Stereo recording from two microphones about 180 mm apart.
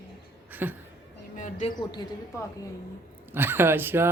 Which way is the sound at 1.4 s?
45° left (ahead or behind).